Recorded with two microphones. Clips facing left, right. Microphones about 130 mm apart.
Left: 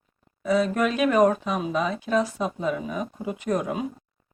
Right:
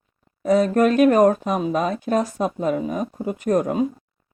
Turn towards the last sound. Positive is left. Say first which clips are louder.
# right 6 dB
turn(degrees=-40)  # may be behind; listen again after turning